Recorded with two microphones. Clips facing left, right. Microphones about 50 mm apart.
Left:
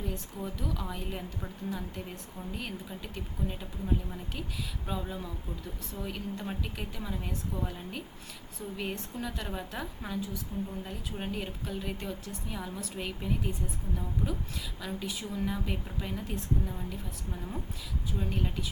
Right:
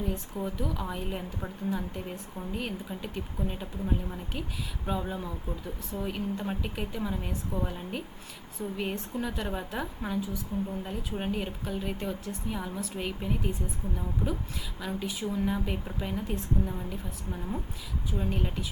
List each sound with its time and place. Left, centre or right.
0.3 s a woman's voice: centre